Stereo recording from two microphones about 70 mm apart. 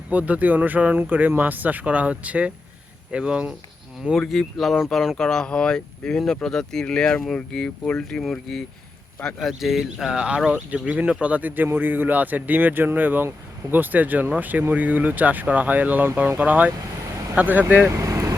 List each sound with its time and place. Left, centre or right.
0.1 s speech: right
4.1 s speech: centre; by 17.8 s right
17.9 s vehicle: right